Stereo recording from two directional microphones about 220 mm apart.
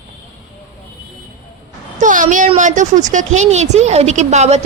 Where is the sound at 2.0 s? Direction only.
35° right (ahead or behind).